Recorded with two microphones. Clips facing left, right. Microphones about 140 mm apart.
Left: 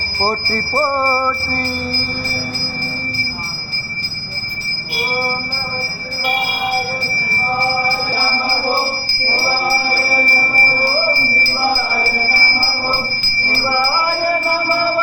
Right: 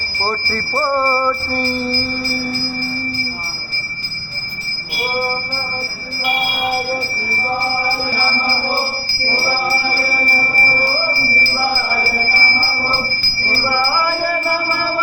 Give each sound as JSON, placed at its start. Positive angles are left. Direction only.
{"t": 0.2, "sound": "bell", "side_deg": 20}